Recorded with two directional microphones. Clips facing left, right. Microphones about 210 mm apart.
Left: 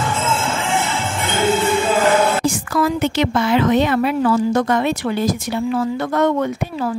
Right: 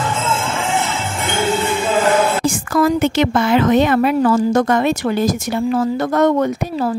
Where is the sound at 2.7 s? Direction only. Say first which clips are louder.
Right 5 dB; 50° right (ahead or behind).